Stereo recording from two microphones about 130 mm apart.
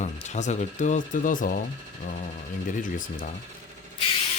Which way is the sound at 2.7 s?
90° left.